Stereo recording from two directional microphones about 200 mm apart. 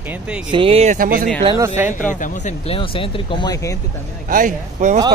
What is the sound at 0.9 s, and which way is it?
Speech, 45° right (ahead or behind).